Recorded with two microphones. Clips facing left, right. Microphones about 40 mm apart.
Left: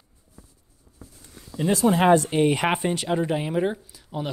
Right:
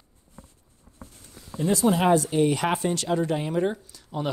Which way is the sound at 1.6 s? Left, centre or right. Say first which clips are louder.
Left 2 dB; left.